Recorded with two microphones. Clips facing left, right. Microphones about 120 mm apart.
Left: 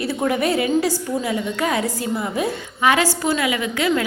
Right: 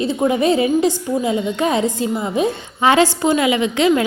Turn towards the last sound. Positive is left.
turn(degrees=-25)  # may be behind; listen again after turning